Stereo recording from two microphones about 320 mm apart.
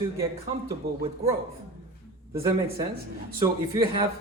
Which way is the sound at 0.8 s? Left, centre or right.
Right.